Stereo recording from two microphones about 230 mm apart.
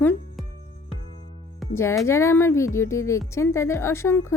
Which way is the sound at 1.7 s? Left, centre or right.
Centre.